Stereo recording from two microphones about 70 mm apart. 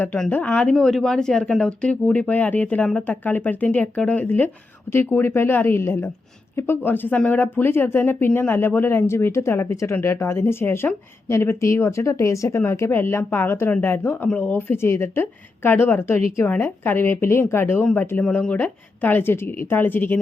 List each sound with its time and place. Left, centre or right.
0.3 s a woman's voice: left
18.2 s speech: centre